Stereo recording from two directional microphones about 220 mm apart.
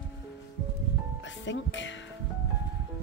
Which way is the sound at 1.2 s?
55° left (ahead or behind).